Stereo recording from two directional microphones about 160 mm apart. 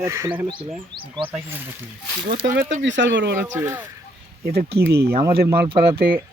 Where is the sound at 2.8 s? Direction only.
90° right.